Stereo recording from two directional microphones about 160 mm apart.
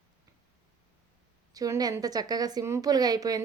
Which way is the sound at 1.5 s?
20° right (ahead or behind).